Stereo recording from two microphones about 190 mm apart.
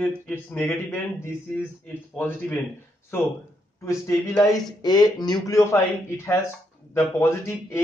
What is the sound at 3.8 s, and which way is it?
A man's voice, 15° left (ahead or behind).